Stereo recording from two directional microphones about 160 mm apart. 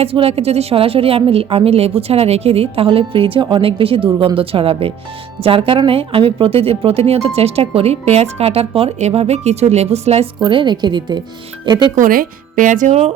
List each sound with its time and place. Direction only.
0.0 s speech: 35° right (ahead or behind)
11.9 s speech: 60° right (ahead or behind); by 13.1 s 45° right (ahead or behind)